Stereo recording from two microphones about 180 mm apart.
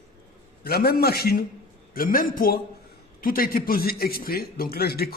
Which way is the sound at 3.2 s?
55° left (ahead or behind).